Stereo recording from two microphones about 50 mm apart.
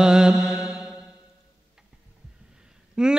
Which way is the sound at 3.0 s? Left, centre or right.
Centre.